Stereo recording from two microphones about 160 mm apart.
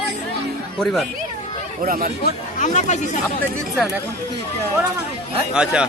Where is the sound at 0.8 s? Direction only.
5° left (ahead or behind).